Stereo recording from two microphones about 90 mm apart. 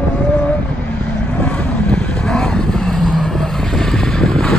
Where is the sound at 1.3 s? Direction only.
10° left (ahead or behind).